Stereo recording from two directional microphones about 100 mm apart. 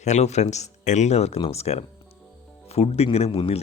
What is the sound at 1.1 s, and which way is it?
Speech, 90° left.